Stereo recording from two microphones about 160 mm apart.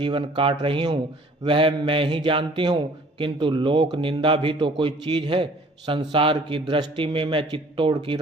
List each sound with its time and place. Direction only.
0.0 s a man's voice: 30° right (ahead or behind)